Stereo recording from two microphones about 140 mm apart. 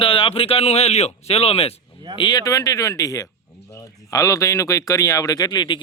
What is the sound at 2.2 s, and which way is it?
Speech, 30° left (ahead or behind).